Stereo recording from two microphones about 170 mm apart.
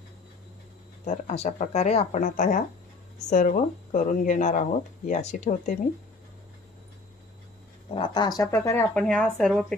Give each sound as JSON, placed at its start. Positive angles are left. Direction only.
{"t": 1.0, "sound": "speech", "side_deg": 45}
{"t": 8.0, "sound": "speech", "side_deg": 25}